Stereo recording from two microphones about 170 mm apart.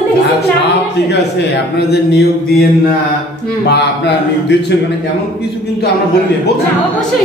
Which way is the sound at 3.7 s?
80° left.